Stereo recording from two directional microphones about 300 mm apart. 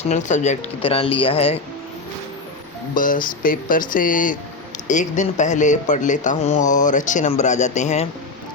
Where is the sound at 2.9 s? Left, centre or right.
Left.